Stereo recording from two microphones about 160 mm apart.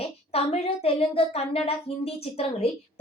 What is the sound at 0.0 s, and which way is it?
Speech, 40° left (ahead or behind).